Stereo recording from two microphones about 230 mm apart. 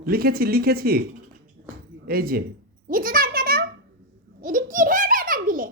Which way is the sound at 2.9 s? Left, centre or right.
Right.